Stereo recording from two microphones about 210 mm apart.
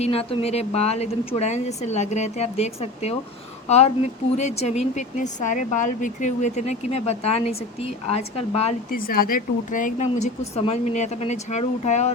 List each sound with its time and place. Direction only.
0.0 s speech: 30° left (ahead or behind)
9.0 s speech: 45° left (ahead or behind)